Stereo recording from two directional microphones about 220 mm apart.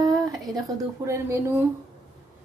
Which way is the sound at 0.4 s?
Centre (ahead or behind).